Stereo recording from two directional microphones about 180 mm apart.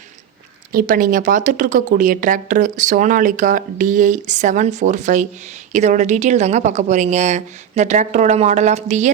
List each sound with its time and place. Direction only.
0.7 s a woman's voice: 50° right (ahead or behind)